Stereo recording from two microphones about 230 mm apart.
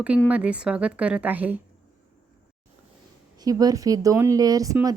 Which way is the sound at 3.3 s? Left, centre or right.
Centre.